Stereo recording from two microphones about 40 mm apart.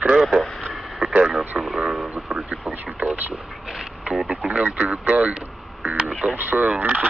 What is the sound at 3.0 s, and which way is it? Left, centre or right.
Speech, right.